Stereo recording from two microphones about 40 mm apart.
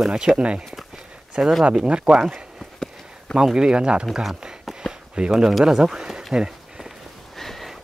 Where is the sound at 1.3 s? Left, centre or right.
Right.